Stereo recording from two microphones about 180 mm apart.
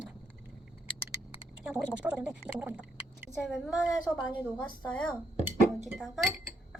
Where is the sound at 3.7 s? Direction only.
20° left (ahead or behind).